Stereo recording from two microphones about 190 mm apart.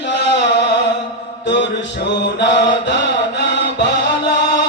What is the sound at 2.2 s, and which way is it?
Mantra, 65° left (ahead or behind).